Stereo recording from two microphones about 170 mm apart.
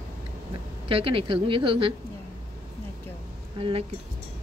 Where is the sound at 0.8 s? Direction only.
35° right (ahead or behind).